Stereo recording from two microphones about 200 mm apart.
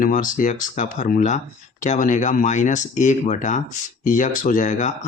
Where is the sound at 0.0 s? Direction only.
40° left (ahead or behind).